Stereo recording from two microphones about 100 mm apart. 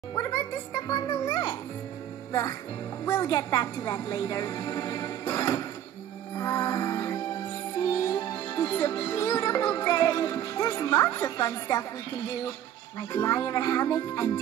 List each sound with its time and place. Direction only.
0.3 s a child's voice: 40° left (ahead or behind)
3.3 s a woman's voice: 40° left (ahead or behind)
6.3 s music: 30° left (ahead or behind)